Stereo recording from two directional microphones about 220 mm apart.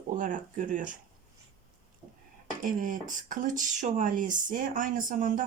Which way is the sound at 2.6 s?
35° right (ahead or behind).